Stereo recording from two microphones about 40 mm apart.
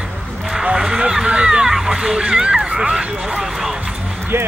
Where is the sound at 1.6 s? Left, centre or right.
Centre.